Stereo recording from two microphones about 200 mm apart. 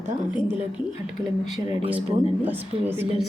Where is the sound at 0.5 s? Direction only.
5° right (ahead or behind).